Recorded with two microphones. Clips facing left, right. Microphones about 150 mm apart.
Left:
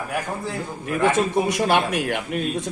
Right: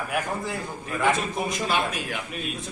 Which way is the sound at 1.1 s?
85° left.